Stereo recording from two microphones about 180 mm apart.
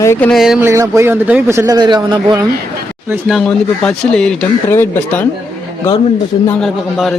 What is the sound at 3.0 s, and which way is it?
Speech, 5° right (ahead or behind).